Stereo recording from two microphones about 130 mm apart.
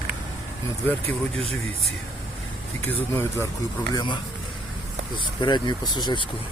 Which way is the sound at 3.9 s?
35° left (ahead or behind).